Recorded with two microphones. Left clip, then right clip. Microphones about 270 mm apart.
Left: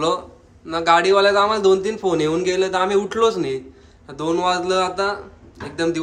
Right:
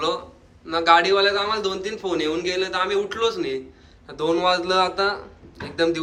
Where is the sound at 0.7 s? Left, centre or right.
Centre.